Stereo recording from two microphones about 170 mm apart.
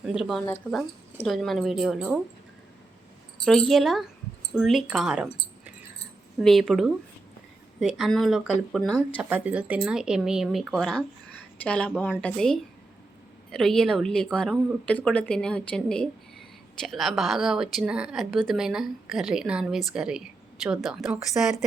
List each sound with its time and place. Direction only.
0.0 s speech: centre (ahead or behind)
3.4 s speech: centre (ahead or behind)
6.4 s speech: centre (ahead or behind)
9.1 s speech: 10° right (ahead or behind)